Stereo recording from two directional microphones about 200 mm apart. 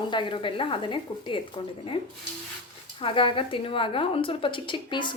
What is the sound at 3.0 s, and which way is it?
Speech, 25° left (ahead or behind).